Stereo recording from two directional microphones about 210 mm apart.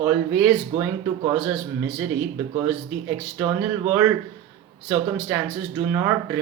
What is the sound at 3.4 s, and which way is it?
Speech, 10° right (ahead or behind).